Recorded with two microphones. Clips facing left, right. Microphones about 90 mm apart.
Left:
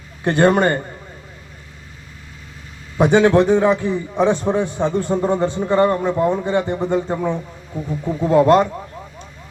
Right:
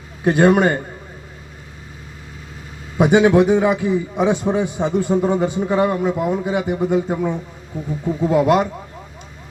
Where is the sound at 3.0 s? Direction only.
15° right (ahead or behind).